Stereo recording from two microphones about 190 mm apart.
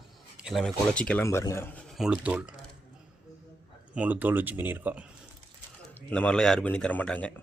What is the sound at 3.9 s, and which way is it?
Speech, 10° right (ahead or behind).